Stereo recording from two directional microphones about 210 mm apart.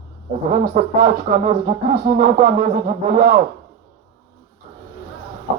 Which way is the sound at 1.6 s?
45° right (ahead or behind).